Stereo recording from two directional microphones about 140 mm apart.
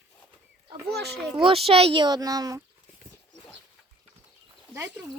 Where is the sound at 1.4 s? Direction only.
40° right (ahead or behind).